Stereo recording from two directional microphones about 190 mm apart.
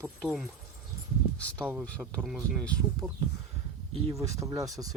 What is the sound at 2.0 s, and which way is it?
Speech, 5° right (ahead or behind).